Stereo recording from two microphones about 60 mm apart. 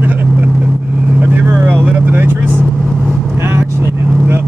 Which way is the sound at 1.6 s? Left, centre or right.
Right.